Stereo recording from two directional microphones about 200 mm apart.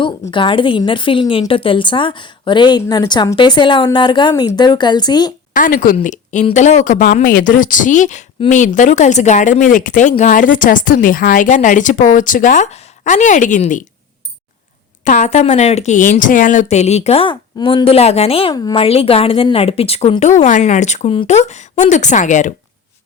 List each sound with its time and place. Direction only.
0.0 s a woman's voice: 25° left (ahead or behind)
5.5 s speech: 45° left (ahead or behind)
15.0 s speech: 40° left (ahead or behind)